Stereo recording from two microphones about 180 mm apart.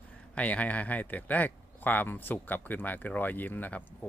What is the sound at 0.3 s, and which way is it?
Speech, 10° left (ahead or behind).